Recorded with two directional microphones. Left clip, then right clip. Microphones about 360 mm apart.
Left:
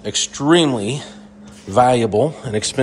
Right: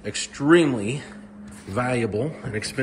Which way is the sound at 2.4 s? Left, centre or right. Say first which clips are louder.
Left 8 dB; centre.